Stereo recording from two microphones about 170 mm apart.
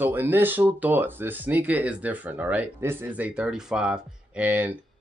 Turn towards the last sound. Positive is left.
turn(degrees=-10)  # may be behind; listen again after turning